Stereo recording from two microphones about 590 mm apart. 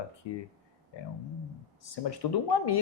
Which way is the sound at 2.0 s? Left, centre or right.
Left.